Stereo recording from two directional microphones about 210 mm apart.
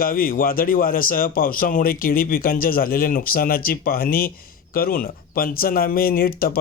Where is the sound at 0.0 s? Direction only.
40° left (ahead or behind).